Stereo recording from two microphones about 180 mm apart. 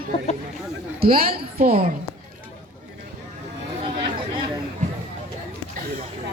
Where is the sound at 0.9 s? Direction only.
55° right (ahead or behind).